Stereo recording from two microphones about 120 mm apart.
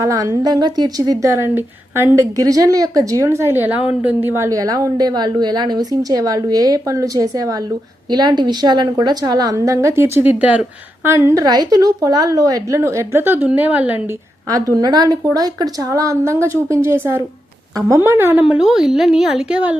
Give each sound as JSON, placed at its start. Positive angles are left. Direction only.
{"t": 0.0, "sound": "a woman's voice", "side_deg": -25}
{"t": 11.1, "sound": "a woman's voice", "side_deg": -25}
{"t": 14.5, "sound": "a woman's voice", "side_deg": -30}
{"t": 18.4, "sound": "a woman's voice", "side_deg": -5}